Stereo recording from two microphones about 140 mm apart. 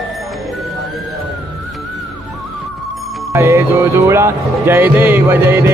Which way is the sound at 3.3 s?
15° right (ahead or behind).